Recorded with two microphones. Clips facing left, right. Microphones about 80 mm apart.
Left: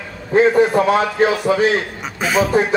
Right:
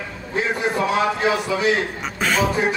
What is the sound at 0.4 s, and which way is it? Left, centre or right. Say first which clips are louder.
Speech: left 9 dB; left.